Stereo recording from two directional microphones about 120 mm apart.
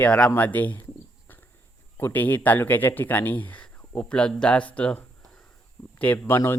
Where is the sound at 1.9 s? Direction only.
15° left (ahead or behind).